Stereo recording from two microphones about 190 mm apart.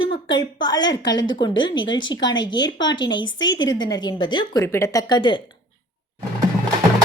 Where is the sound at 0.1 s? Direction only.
25° left (ahead or behind).